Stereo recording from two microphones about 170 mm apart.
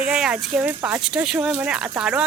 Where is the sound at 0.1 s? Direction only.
5° right (ahead or behind).